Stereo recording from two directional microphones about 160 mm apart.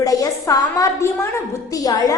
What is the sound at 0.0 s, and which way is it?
A woman's voice, 20° left (ahead or behind).